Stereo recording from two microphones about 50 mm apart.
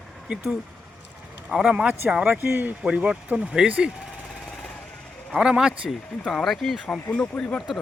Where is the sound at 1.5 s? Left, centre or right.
Right.